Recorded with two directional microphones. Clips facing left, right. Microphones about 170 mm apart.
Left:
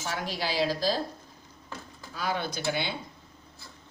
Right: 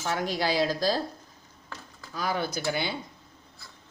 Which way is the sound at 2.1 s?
40° right (ahead or behind).